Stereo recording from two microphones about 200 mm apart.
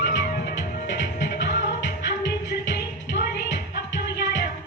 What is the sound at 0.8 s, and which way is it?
Music, 60° left (ahead or behind).